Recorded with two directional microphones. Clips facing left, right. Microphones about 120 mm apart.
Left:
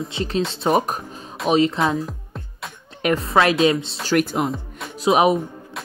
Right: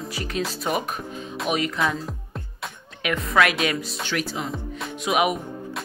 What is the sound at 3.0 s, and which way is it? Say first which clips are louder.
Speech: left 4 dB; 30° left (ahead or behind).